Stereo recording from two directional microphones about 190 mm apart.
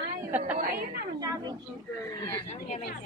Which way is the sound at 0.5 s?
50° right (ahead or behind).